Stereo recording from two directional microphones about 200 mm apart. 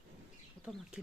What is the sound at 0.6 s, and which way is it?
Speech, 5° right (ahead or behind).